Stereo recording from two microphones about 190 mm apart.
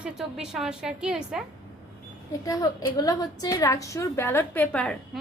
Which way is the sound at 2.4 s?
20° left (ahead or behind).